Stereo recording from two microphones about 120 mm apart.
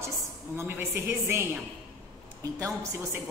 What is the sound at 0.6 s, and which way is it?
Speech, 20° right (ahead or behind).